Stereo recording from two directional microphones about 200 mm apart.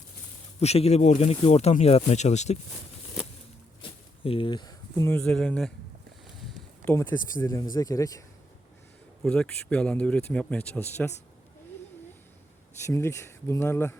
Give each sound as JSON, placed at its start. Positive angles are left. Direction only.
{"t": 0.6, "sound": "speech", "side_deg": 30}
{"t": 3.8, "sound": "speech", "side_deg": 25}
{"t": 9.2, "sound": "speech", "side_deg": 5}
{"t": 12.8, "sound": "speech", "side_deg": 15}